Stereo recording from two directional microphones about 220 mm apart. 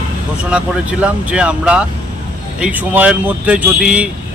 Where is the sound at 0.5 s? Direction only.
5° right (ahead or behind).